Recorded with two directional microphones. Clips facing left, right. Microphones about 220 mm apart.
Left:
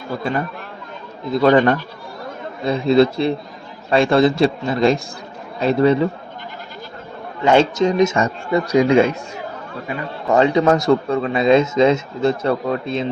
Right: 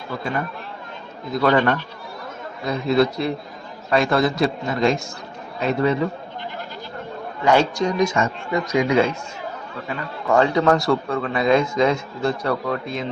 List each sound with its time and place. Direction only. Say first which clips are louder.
1.3 s a man's voice: left 5 dB; 25° left (ahead or behind)
7.4 s a man's voice: left 4 dB; 25° left (ahead or behind)
8.2 s speech: left 4 dB; 35° left (ahead or behind)
9.9 s a man's voice: left 2 dB; 20° left (ahead or behind)